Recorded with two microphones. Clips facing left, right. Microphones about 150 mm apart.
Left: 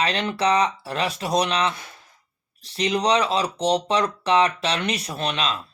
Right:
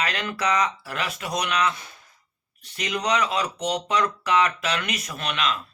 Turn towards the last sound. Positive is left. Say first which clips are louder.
# left 2 dB
turn(degrees=30)  # may be behind; listen again after turning